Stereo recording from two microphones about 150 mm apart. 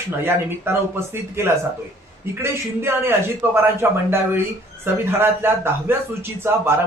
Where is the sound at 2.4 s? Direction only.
15° right (ahead or behind).